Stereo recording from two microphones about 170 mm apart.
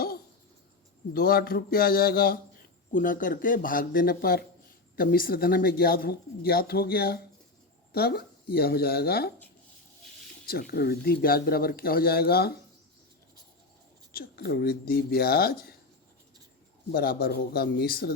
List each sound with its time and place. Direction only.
1.1 s speech: 60° left (ahead or behind)
10.4 s speech: 60° left (ahead or behind)
14.1 s speech: 65° left (ahead or behind)
16.9 s speech: 60° left (ahead or behind)